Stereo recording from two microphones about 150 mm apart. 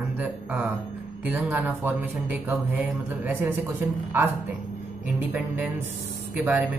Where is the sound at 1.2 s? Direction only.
15° right (ahead or behind).